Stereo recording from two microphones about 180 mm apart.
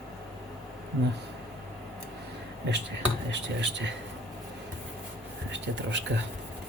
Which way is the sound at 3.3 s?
80° right.